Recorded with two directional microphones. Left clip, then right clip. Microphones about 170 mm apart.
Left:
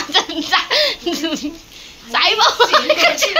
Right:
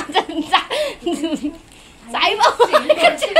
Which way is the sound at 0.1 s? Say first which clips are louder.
Left 1 dB; 20° right (ahead or behind).